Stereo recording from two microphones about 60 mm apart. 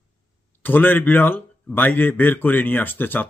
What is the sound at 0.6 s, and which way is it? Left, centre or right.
Speech, left.